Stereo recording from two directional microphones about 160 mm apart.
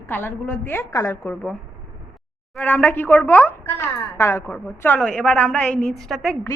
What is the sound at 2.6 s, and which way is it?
A woman's voice, 10° left (ahead or behind).